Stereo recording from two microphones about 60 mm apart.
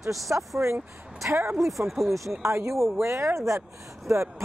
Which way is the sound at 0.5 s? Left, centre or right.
Right.